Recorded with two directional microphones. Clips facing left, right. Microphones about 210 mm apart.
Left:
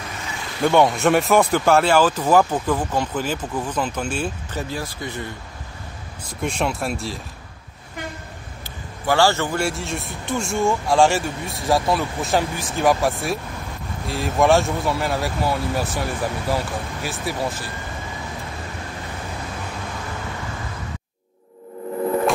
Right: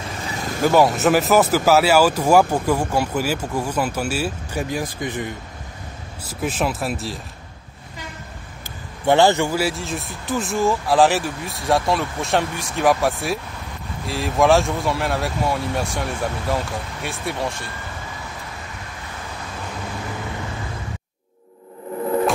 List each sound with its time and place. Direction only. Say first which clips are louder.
0.3 s vehicle: right 5 dB; 40° right (ahead or behind)
0.6 s speech: right 1 dB; 5° right (ahead or behind)
6.4 s speech: right 1 dB; 5° right (ahead or behind)
9.0 s a man's voice: right 3 dB; 20° right (ahead or behind)
9.5 s speech: right 1 dB; centre (ahead or behind)